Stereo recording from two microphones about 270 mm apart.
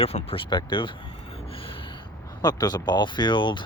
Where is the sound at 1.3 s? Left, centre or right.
Left.